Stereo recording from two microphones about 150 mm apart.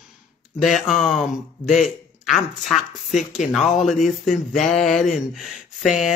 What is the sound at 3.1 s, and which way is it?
Speech, 55° left (ahead or behind).